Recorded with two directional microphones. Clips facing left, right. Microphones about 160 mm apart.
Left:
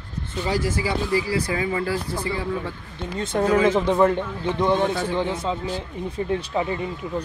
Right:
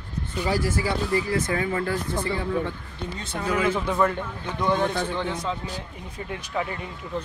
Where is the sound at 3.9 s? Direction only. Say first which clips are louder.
Left 5 dB; 25° left (ahead or behind).